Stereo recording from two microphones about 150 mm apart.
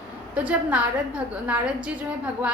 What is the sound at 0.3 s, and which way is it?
A woman's voice, 10° right (ahead or behind).